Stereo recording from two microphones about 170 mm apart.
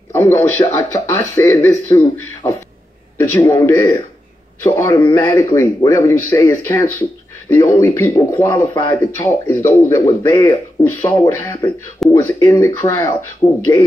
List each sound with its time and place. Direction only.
0.1 s a man's voice: 15° left (ahead or behind)